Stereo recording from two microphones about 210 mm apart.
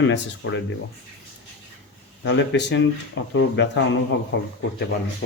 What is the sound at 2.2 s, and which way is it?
Speech, 60° left (ahead or behind).